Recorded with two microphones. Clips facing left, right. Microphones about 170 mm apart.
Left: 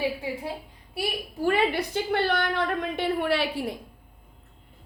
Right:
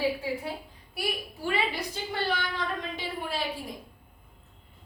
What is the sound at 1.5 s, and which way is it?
A woman's voice, 60° left (ahead or behind).